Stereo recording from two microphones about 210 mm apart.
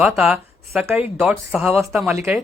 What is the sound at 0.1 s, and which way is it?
A man's voice, centre (ahead or behind).